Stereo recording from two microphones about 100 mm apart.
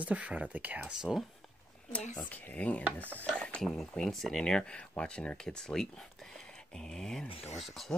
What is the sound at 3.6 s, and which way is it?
Speech, 5° left (ahead or behind).